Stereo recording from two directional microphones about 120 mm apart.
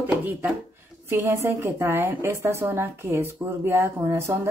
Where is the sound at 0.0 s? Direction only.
15° right (ahead or behind).